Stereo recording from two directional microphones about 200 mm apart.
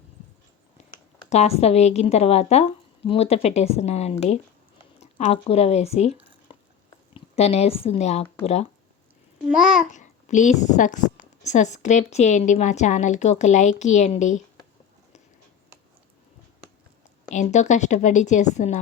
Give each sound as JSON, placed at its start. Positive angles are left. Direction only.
{"t": 0.8, "sound": "a sound", "side_deg": 35}
{"t": 1.3, "sound": "a woman's voice", "side_deg": 35}
{"t": 7.3, "sound": "a woman's voice", "side_deg": 30}
{"t": 9.6, "sound": "speech", "side_deg": -5}
{"t": 9.9, "sound": "a woman's voice", "side_deg": 35}
{"t": 17.2, "sound": "a woman's voice", "side_deg": 35}